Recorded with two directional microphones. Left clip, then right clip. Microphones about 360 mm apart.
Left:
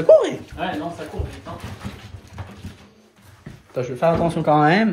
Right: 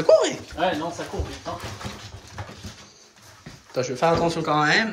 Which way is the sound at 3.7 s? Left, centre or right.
Centre.